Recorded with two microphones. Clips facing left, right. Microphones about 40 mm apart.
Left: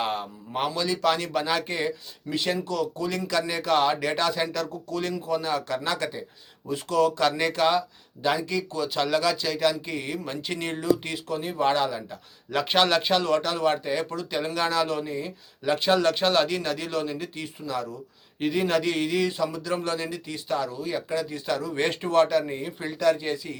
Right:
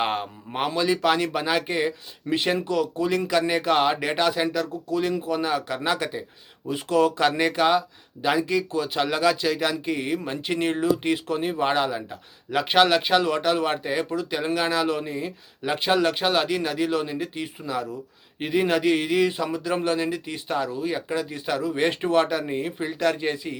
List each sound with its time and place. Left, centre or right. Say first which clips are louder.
0.0 s a sound: right 3 dB; right
0.8 s a man's voice: right 4 dB; centre
2.3 s a man's voice: right 4 dB; right
23.0 s speech: left 2 dB; right